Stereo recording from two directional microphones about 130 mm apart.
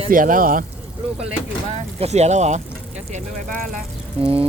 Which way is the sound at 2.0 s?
60° right (ahead or behind).